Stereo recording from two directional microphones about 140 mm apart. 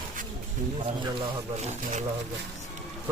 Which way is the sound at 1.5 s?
55° right (ahead or behind).